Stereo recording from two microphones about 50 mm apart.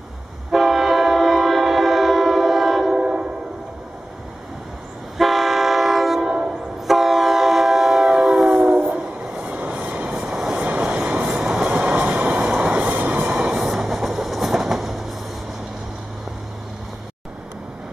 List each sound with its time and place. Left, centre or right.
0.5 s train: centre
5.1 s train: centre
8.5 s train: centre
10.6 s vehicle: right
11.0 s train: right; by 15.0 s centre